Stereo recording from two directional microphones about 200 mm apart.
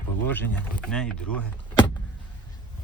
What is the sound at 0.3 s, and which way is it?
Speech, 10° left (ahead or behind).